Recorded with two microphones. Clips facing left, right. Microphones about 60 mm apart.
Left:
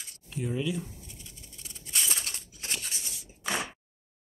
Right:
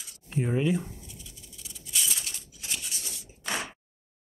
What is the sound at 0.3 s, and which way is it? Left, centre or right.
Speech, right.